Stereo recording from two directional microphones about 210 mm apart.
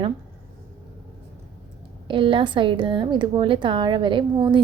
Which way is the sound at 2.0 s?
25° right (ahead or behind).